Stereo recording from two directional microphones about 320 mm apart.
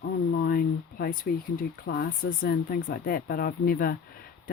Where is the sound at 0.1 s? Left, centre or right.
Left.